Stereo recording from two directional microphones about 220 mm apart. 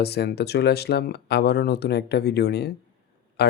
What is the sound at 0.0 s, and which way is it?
Speech, 50° left (ahead or behind).